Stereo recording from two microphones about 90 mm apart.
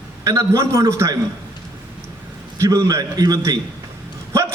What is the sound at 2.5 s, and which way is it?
Speech, 35° right (ahead or behind).